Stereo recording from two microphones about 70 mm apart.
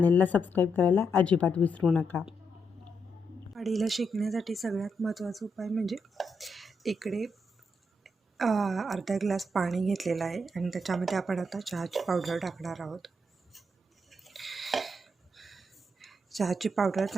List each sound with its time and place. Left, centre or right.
0.0 s speech: left
3.5 s a woman's voice: centre
14.1 s a sound: centre